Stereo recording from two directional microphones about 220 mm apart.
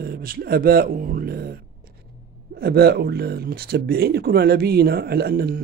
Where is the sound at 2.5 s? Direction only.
45° right (ahead or behind).